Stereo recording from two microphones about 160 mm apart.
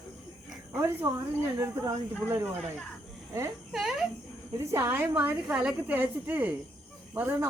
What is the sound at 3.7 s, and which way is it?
Speech, centre (ahead or behind).